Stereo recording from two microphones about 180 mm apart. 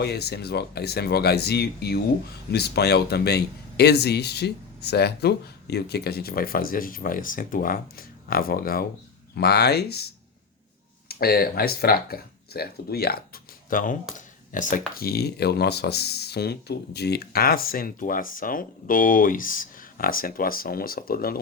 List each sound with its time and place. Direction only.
0.0 s speech: 65° left (ahead or behind)
11.1 s speech: 55° left (ahead or behind)